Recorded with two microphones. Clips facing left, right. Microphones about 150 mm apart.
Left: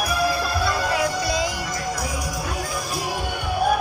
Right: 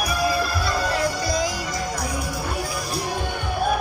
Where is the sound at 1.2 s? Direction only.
70° left (ahead or behind).